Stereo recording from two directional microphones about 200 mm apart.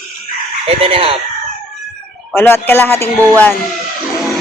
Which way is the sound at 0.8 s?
30° right (ahead or behind).